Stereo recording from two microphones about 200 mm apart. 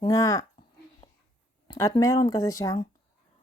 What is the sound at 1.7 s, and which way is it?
Speech, 15° left (ahead or behind).